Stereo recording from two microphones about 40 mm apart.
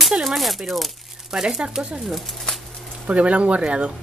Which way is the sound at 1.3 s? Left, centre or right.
Centre.